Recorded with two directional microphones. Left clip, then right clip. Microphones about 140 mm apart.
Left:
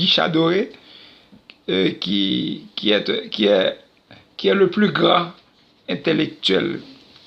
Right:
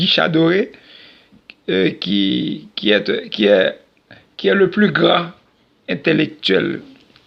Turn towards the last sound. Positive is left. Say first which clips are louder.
# right 3 dB
turn(degrees=-35)  # may be behind; listen again after turning